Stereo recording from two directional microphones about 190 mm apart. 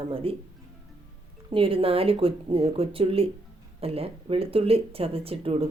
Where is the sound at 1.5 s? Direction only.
30° right (ahead or behind).